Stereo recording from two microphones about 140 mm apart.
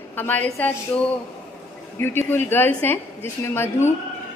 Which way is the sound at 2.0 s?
15° left (ahead or behind).